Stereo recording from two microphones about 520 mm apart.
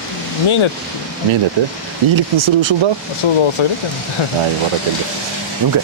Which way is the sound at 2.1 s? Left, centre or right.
Right.